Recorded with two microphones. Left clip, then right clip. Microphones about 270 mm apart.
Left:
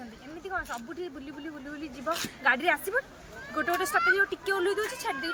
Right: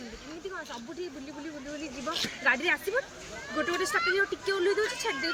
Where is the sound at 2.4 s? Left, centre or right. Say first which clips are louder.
Left 1 dB; centre.